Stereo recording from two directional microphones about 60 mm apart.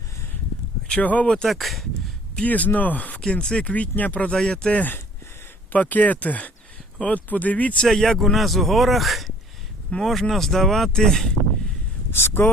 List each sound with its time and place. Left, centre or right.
0.9 s speech: left
1.5 s a man's voice: centre
2.3 s speech: left
3.2 s speech: centre
4.4 s speech: centre
4.8 s speech: left
7.9 s a man's voice: centre
12.1 s speech: left